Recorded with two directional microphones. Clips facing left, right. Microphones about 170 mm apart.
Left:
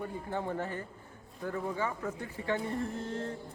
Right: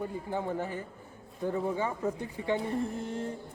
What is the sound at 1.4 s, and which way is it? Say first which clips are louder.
A man's voice: right 4 dB; 20° right (ahead or behind).